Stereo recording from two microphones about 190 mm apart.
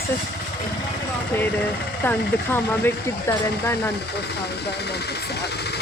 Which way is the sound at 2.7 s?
10° left (ahead or behind).